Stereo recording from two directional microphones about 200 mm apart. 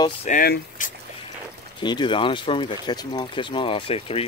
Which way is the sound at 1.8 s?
20° left (ahead or behind).